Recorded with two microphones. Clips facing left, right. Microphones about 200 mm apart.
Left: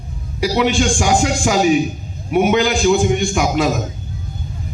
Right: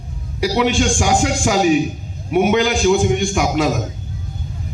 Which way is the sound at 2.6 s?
65° right (ahead or behind).